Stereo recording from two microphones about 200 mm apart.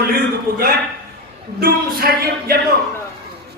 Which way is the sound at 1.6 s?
50° right (ahead or behind).